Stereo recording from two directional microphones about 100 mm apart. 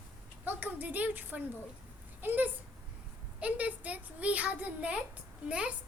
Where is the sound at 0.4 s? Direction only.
15° right (ahead or behind).